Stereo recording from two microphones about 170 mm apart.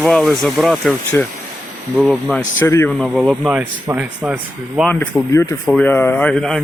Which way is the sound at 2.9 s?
Centre (ahead or behind).